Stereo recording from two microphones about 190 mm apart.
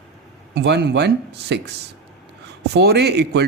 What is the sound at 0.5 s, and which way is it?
Speech, 60° right (ahead or behind).